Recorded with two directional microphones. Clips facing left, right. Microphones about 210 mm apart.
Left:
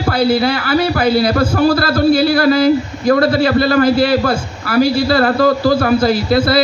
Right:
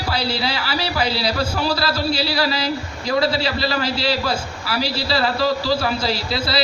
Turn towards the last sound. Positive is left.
turn(degrees=50)  # may be behind; listen again after turning